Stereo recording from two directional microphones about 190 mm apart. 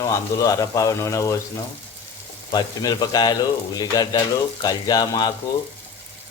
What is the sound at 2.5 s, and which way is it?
Speech, 20° left (ahead or behind).